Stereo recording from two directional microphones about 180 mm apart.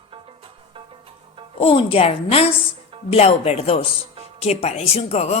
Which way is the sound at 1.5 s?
30° left (ahead or behind).